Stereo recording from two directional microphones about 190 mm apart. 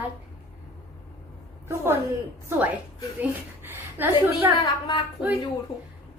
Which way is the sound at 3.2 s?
10° right (ahead or behind).